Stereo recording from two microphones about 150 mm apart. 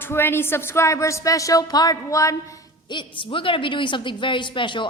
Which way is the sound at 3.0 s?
35° left (ahead or behind).